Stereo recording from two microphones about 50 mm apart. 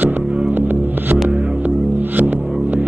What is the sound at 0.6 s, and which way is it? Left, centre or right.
Music, right.